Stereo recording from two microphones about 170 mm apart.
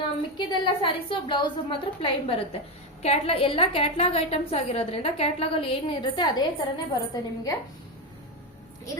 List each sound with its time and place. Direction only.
0.3 s a woman's voice: 30° left (ahead or behind)